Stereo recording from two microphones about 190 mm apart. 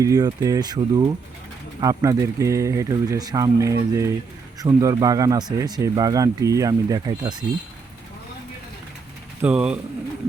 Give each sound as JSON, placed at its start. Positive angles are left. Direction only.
{"t": 0.0, "sound": "speech", "side_deg": -20}
{"t": 9.4, "sound": "speech", "side_deg": -5}